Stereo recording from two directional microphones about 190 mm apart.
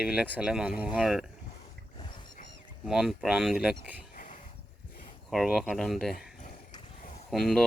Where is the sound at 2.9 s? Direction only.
Centre (ahead or behind).